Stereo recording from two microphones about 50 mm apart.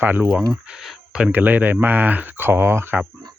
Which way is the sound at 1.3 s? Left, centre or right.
Right.